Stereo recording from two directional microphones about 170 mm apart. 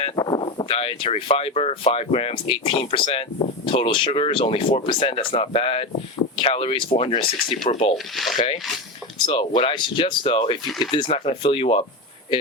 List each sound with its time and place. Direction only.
0.2 s speech: 25° left (ahead or behind)
8.1 s rub: centre (ahead or behind)
9.1 s speech: 25° left (ahead or behind)